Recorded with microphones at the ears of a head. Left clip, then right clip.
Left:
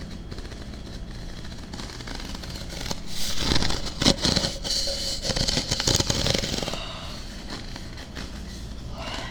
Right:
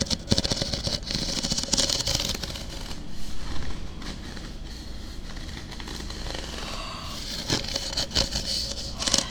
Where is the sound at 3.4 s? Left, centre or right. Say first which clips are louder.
Left 14 dB; left.